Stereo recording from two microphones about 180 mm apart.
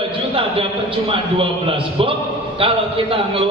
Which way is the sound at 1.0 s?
30° right (ahead or behind).